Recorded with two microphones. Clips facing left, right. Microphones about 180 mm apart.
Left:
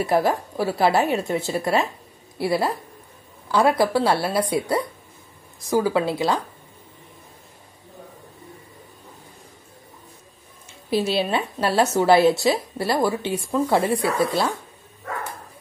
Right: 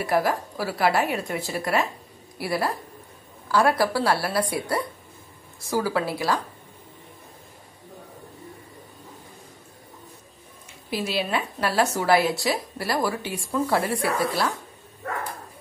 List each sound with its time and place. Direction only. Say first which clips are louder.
0.0 s a woman's voice: left 3 dB; 25° left (ahead or behind)
10.9 s a woman's voice: left 5 dB; 30° left (ahead or behind)